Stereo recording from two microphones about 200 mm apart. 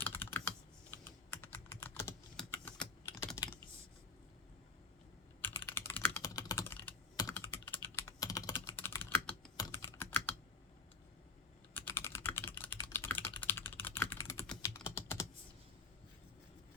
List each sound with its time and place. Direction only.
0.0 s computer keyboard: 10° left (ahead or behind)
2.3 s typing: 5° left (ahead or behind)
5.4 s computer keyboard: 10° left (ahead or behind)
11.7 s typing: 10° left (ahead or behind)